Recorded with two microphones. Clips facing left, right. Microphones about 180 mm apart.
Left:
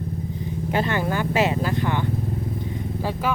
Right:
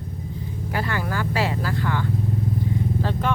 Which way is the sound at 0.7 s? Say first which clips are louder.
Left 4 dB; 25° left (ahead or behind).